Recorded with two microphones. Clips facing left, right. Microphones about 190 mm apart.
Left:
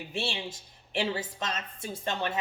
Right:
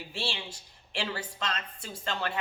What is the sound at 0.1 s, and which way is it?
Speech, 20° left (ahead or behind).